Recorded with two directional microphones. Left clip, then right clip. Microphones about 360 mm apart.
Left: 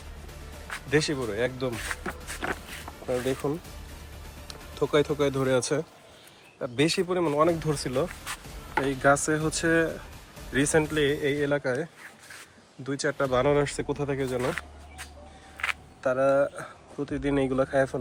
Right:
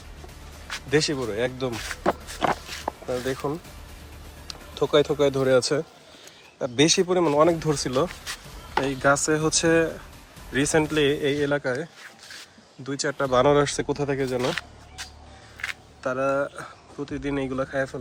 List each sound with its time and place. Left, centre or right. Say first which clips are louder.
0.7 s speech: right 3 dB; centre
2.4 s a sound: right 8 dB; centre
3.1 s speech: left 1 dB; centre
16.0 s speech: left 2 dB; centre